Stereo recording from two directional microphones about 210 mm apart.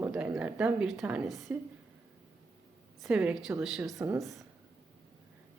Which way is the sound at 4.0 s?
15° right (ahead or behind).